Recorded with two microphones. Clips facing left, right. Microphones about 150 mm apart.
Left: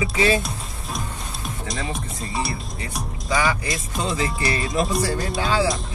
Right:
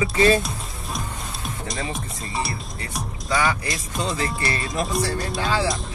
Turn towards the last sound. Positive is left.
turn(degrees=0)  # may be behind; listen again after turning